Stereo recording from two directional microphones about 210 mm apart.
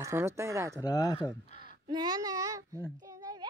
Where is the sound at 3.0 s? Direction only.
15° right (ahead or behind).